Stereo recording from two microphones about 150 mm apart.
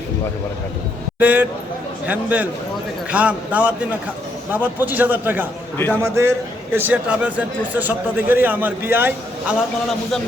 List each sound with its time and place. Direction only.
1.2 s a man's voice: 10° right (ahead or behind)
5.7 s a man's voice: 15° left (ahead or behind)
6.0 s a man's voice: 15° right (ahead or behind)